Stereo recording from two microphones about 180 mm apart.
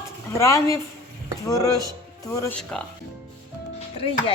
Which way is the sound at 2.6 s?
5° left (ahead or behind).